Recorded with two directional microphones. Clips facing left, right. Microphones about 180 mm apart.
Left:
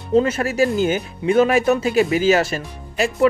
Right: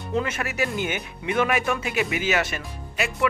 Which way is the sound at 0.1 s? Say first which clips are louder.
Left 10 dB; 30° left (ahead or behind).